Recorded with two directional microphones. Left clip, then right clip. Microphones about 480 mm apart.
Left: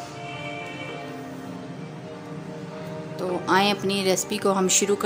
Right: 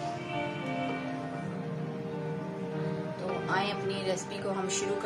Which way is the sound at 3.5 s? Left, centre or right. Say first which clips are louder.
Left 11 dB; centre.